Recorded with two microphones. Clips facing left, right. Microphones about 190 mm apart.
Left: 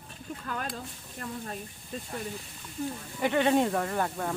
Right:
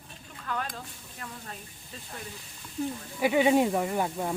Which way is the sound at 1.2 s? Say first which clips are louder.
Left 6 dB; 40° left (ahead or behind).